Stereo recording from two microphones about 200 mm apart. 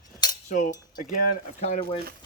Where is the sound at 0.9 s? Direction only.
45° left (ahead or behind).